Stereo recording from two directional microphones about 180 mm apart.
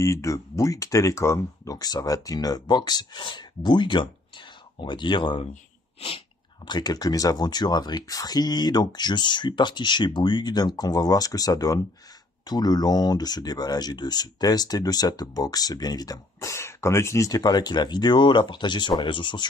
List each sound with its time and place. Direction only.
0.0 s speech: 15° left (ahead or behind)
5.5 s a sound: 30° left (ahead or behind)
6.7 s speech: 20° left (ahead or behind)